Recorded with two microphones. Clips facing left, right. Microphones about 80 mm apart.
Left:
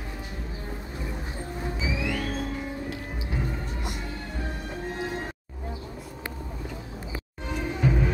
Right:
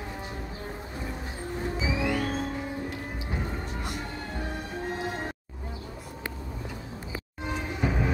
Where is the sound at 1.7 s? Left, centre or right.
Right.